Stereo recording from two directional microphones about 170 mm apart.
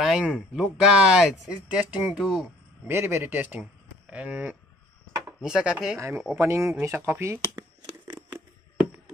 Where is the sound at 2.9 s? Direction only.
15° right (ahead or behind).